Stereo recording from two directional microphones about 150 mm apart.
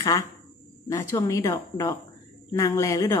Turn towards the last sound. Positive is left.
turn(degrees=20)  # may be behind; listen again after turning